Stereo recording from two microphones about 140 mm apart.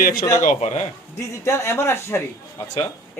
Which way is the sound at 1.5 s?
20° left (ahead or behind).